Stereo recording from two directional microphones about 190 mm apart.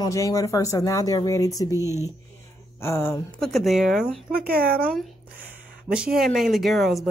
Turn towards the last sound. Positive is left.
turn(degrees=0)  # may be behind; listen again after turning